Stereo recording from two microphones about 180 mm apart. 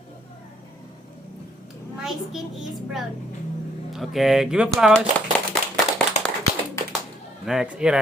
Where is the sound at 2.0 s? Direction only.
Centre (ahead or behind).